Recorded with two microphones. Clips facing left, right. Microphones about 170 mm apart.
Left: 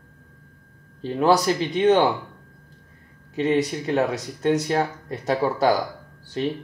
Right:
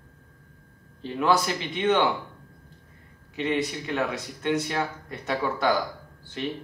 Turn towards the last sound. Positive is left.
turn(degrees=35)  # may be behind; listen again after turning